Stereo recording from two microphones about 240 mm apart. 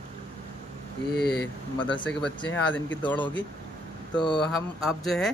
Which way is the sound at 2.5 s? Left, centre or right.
Centre.